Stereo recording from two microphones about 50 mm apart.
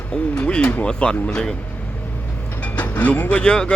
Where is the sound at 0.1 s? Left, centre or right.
Left.